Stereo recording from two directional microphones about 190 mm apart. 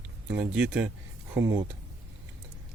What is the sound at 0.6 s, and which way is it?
Speech, 10° right (ahead or behind).